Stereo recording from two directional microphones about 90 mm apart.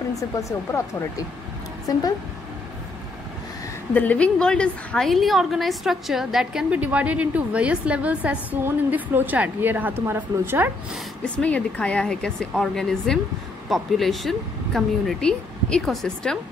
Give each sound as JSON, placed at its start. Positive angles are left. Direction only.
{"t": 0.1, "sound": "speech", "side_deg": 35}
{"t": 3.9, "sound": "speech", "side_deg": 15}
{"t": 6.4, "sound": "a woman's voice", "side_deg": -15}
{"t": 11.3, "sound": "a woman's voice", "side_deg": 15}